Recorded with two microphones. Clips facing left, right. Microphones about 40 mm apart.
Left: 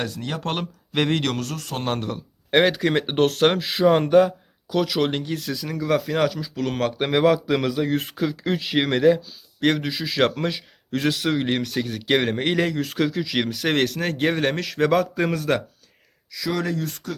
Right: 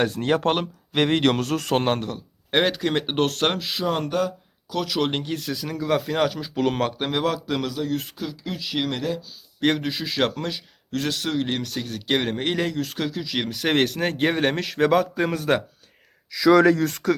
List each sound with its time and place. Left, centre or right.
0.1 s speech: right
0.4 s speech: centre
1.2 s speech: right
1.5 s a man's voice: right
2.0 s a man's voice: centre
4.7 s a man's voice: centre
6.4 s speech: right
6.7 s speech: centre
7.0 s a man's voice: centre
7.9 s speech: left
9.6 s a man's voice: centre
16.3 s speech: right